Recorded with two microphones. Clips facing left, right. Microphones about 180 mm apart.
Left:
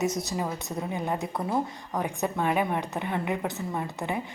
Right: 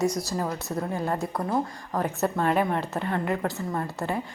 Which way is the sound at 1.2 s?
Centre (ahead or behind).